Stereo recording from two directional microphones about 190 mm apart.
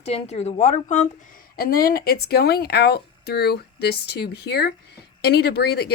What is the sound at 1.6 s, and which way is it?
Speech, 50° left (ahead or behind).